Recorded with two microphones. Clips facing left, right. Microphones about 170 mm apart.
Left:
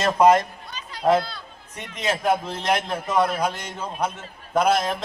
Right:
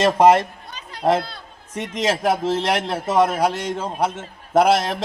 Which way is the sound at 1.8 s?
90° right.